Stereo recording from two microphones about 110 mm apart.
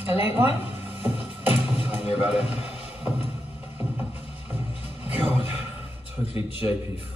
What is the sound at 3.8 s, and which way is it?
Music, 15° right (ahead or behind).